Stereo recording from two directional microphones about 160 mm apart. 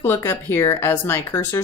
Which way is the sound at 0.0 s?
15° left (ahead or behind).